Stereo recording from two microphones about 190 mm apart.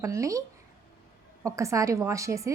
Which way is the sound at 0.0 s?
15° right (ahead or behind).